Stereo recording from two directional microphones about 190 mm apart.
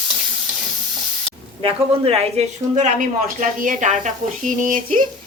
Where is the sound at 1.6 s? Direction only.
30° right (ahead or behind).